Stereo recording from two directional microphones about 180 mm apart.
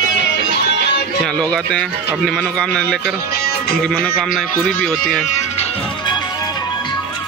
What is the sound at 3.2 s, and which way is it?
Music, 60° left (ahead or behind).